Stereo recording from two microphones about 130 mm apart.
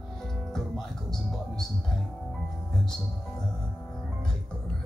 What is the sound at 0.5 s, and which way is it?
Speech, centre (ahead or behind).